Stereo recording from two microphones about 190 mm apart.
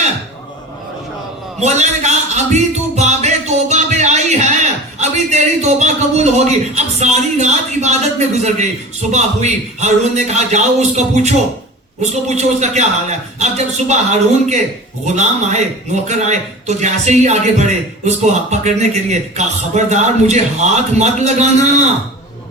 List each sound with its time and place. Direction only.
1.6 s music: 35° right (ahead or behind)
8.4 s a man's voice: 40° right (ahead or behind)